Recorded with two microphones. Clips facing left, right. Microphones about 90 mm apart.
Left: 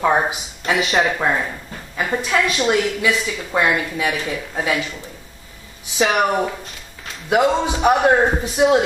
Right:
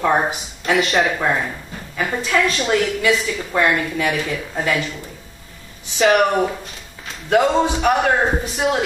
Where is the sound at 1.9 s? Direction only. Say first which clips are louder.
Even; 15° left (ahead or behind).